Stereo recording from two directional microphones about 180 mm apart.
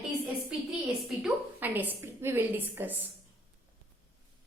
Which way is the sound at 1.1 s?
5° right (ahead or behind).